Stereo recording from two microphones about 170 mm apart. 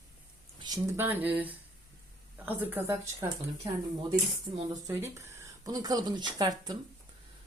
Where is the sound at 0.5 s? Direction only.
25° right (ahead or behind).